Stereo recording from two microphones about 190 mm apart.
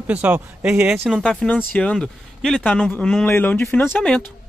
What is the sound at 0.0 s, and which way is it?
Speech, 10° right (ahead or behind).